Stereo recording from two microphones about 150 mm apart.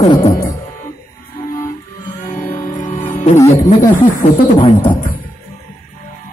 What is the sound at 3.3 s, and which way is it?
Music, 20° left (ahead or behind).